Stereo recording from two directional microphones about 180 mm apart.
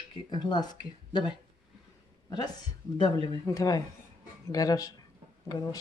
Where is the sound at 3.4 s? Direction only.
20° left (ahead or behind).